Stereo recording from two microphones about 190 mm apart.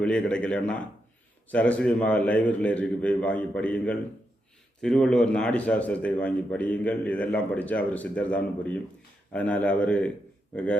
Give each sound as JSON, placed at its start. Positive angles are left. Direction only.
{"t": 0.0, "sound": "a man's voice", "side_deg": 5}